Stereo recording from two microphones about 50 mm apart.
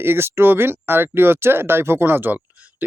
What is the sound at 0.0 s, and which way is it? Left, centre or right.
Speech, right.